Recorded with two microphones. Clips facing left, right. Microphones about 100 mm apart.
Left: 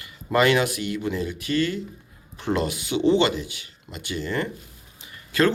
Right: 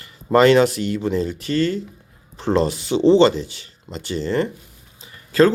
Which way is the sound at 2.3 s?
30° right (ahead or behind).